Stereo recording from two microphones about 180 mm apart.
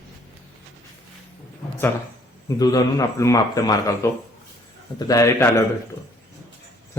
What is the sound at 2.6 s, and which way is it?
A man's voice, 20° left (ahead or behind).